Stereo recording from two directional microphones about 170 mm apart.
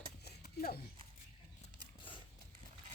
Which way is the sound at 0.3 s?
65° left (ahead or behind).